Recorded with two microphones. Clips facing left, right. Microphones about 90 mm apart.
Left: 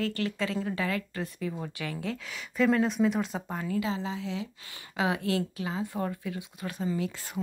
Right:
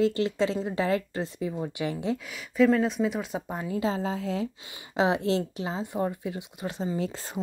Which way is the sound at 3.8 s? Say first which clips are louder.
Right 4 dB; 45° right (ahead or behind).